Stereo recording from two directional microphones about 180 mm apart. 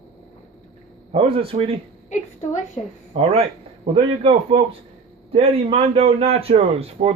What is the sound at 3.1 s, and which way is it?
A man's voice, 35° right (ahead or behind).